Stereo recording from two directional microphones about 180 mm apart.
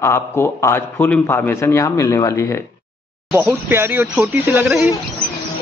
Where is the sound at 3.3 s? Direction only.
10° right (ahead or behind).